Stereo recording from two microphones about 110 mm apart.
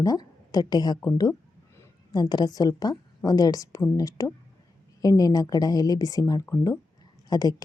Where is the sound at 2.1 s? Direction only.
40° left (ahead or behind).